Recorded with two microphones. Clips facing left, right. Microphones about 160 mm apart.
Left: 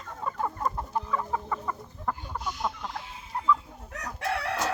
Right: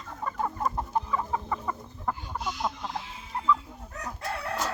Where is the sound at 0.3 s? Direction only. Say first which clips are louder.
Even; centre (ahead or behind).